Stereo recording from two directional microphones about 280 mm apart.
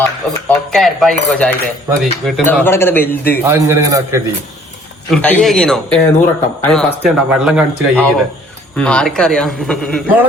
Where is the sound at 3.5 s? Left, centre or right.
Centre.